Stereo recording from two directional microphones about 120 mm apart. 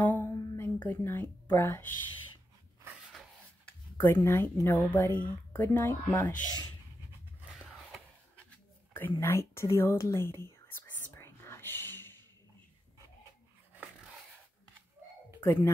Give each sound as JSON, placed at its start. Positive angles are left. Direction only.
{"t": 0.0, "sound": "a sound", "side_deg": 20}
{"t": 0.8, "sound": "speech", "side_deg": 20}
{"t": 3.1, "sound": "rub", "side_deg": 5}
{"t": 4.0, "sound": "a woman's voice", "side_deg": 20}
{"t": 7.5, "sound": "a sound", "side_deg": -5}
{"t": 8.9, "sound": "speech", "side_deg": 20}
{"t": 11.1, "sound": "whispering", "side_deg": 20}
{"t": 13.7, "sound": "dog", "side_deg": -5}
{"t": 15.4, "sound": "speech", "side_deg": 20}